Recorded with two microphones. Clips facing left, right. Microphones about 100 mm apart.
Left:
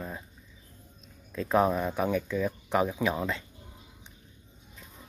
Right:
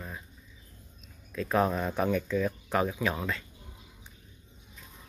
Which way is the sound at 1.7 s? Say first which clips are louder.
Left 1 dB; 10° left (ahead or behind).